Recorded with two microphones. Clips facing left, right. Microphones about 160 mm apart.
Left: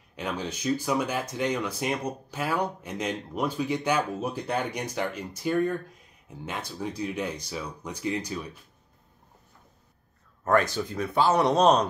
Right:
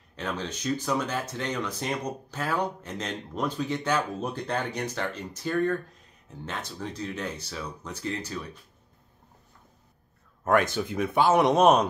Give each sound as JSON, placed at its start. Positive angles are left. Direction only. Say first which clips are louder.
{"t": 0.1, "sound": "speech", "louder": "left 1 dB", "side_deg": 10}
{"t": 10.9, "sound": "speech", "louder": "right 2 dB", "side_deg": -20}